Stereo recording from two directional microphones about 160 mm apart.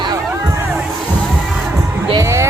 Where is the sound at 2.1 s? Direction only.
20° right (ahead or behind).